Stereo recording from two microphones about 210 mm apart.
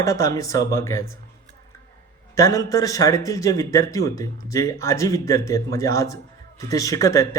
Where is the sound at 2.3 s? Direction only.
15° left (ahead or behind).